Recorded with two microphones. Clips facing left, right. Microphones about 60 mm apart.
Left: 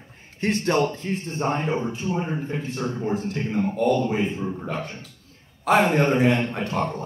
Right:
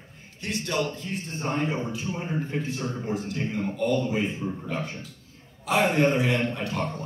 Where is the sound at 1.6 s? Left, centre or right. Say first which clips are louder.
Left 3 dB; left.